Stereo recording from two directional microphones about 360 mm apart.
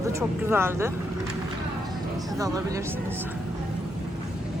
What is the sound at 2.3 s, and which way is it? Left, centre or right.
Speech, centre.